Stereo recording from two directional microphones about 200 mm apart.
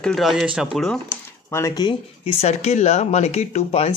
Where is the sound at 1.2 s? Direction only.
15° left (ahead or behind); by 3.9 s 30° left (ahead or behind).